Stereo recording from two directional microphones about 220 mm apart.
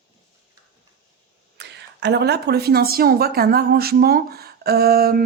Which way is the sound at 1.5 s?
50° right (ahead or behind).